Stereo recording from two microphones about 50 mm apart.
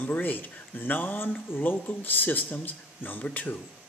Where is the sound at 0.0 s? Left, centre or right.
Left.